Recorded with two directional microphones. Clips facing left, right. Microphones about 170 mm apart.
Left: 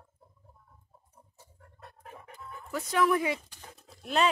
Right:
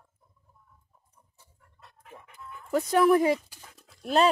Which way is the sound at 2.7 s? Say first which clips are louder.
Right 6 dB; 40° right (ahead or behind).